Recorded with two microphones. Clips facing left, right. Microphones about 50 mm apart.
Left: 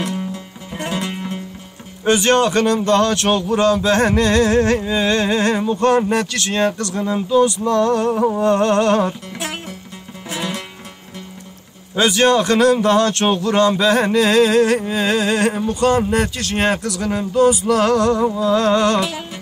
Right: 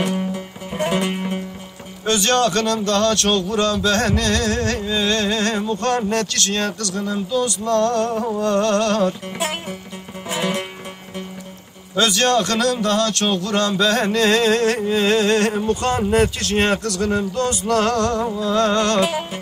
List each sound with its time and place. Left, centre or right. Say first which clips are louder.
0.3 s music: right 2 dB; right
2.0 s speech: left 3 dB; left
10.3 s music: right 3 dB; right
11.9 s a man's voice: left 3 dB; centre
16.7 s a man's voice: right 1 dB; centre
18.9 s music: right 2 dB; right